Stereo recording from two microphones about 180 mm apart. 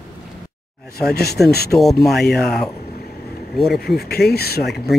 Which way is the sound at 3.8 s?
60° left (ahead or behind).